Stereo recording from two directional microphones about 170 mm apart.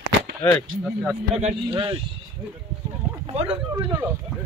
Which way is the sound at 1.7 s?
30° right (ahead or behind).